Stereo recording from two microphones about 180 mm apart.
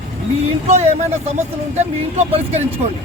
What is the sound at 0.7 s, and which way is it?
Speech, 35° right (ahead or behind).